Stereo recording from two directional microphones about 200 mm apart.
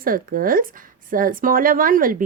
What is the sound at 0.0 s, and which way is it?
A woman's voice, 45° right (ahead or behind).